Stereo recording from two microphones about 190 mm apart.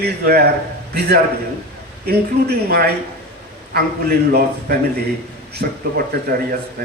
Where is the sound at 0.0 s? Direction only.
55° right (ahead or behind).